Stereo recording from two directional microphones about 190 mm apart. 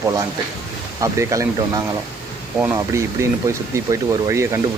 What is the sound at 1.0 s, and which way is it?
Speech, 15° right (ahead or behind).